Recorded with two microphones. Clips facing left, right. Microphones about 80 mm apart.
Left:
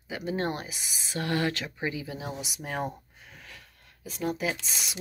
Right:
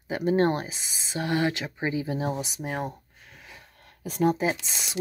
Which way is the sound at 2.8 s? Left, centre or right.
Centre.